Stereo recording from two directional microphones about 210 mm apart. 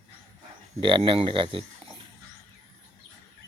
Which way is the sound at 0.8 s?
25° right (ahead or behind).